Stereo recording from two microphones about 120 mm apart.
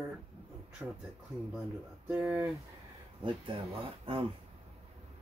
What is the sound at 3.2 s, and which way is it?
Speech, 45° right (ahead or behind).